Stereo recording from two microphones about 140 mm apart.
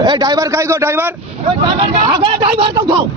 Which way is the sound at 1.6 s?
35° right (ahead or behind).